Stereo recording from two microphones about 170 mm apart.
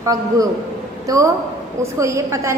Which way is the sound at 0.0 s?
20° right (ahead or behind).